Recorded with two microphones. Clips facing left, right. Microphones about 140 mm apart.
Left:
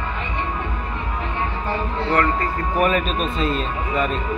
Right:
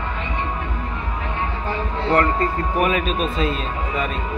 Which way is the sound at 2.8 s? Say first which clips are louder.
Left 1 dB; 5° right (ahead or behind).